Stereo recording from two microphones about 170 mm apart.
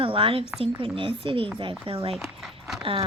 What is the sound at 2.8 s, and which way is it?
Speech, 30° right (ahead or behind).